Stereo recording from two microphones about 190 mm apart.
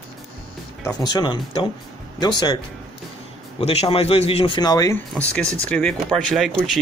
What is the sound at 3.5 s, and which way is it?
Speech, 30° left (ahead or behind).